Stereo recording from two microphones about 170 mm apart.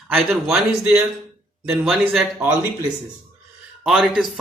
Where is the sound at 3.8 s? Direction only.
Centre (ahead or behind).